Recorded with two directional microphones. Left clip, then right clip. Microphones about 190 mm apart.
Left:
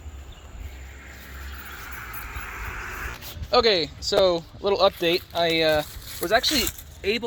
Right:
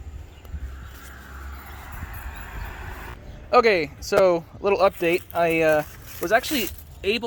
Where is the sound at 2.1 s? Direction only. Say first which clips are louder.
Left 4 dB; 35° right (ahead or behind).